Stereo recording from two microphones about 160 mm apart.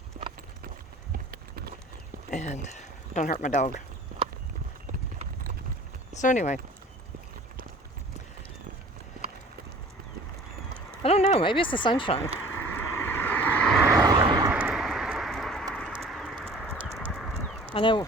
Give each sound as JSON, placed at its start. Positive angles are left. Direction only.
{"t": 0.1, "sound": "clip-clop", "side_deg": -50}
{"t": 1.3, "sound": "clip-clop", "side_deg": -70}
{"t": 2.3, "sound": "speech", "side_deg": 45}
{"t": 6.1, "sound": "speech", "side_deg": 50}
{"t": 11.0, "sound": "speech", "side_deg": 40}
{"t": 12.5, "sound": "vehicle", "side_deg": 15}
{"t": 14.2, "sound": "vehicle", "side_deg": -30}
{"t": 14.5, "sound": "a sound", "side_deg": -5}
{"t": 17.1, "sound": "clip-clop", "side_deg": 5}
{"t": 17.7, "sound": "speech", "side_deg": 30}